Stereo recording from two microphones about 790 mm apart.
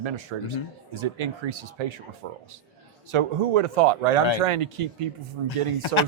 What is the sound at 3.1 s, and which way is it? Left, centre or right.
Speech, right.